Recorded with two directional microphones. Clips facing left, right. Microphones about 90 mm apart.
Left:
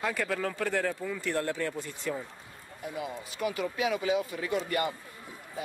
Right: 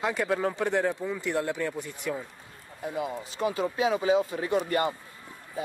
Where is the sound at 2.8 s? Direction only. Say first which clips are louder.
Right 5 dB; 30° right (ahead or behind).